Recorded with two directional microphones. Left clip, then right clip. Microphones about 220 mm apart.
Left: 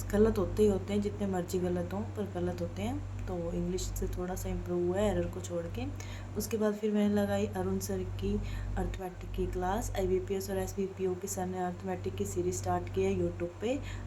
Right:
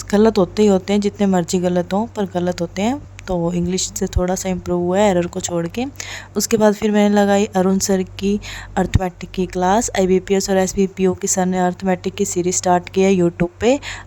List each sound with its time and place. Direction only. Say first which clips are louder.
0.1 s a woman's voice: right 14 dB; 45° right (ahead or behind)